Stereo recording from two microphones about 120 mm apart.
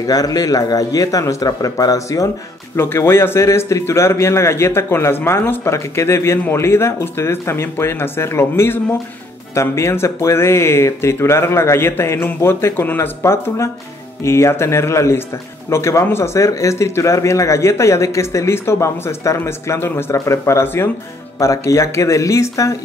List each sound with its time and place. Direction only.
0.0 s speech: 30° left (ahead or behind)